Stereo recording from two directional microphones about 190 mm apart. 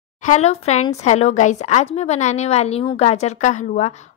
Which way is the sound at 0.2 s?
35° left (ahead or behind).